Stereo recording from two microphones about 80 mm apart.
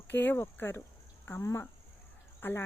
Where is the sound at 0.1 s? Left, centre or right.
Left.